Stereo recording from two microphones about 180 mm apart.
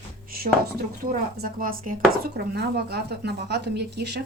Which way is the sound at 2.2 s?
65° right (ahead or behind).